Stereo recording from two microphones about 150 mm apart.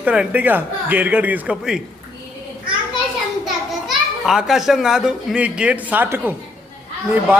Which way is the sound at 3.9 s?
5° right (ahead or behind).